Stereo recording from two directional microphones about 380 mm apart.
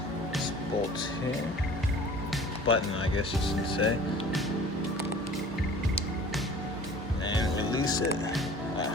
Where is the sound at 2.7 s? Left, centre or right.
Left.